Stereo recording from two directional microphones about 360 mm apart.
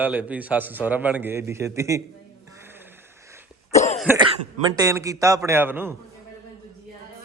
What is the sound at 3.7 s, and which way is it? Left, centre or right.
Cough, centre.